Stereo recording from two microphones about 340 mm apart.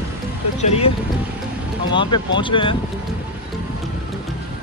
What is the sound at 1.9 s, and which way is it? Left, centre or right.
Speech, centre.